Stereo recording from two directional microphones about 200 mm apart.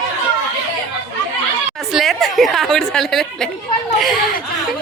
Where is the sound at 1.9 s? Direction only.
Centre (ahead or behind).